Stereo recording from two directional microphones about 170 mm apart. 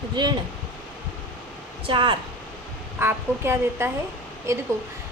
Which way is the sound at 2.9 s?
15° right (ahead or behind).